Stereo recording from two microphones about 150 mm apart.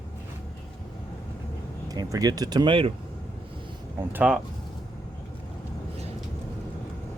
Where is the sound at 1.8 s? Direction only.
25° right (ahead or behind).